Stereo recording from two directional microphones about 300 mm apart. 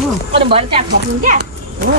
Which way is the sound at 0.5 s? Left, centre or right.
Centre.